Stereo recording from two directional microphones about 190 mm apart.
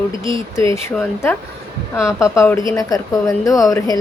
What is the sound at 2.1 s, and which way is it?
A woman's voice, 15° left (ahead or behind).